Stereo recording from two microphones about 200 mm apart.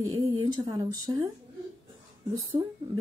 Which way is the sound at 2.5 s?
30° right (ahead or behind).